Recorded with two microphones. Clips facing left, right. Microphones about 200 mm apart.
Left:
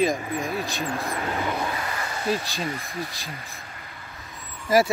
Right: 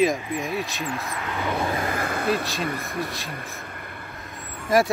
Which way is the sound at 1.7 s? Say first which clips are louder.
Right 5 dB; 50° right (ahead or behind).